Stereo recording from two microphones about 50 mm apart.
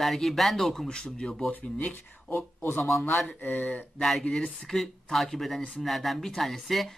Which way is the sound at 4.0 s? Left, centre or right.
Centre.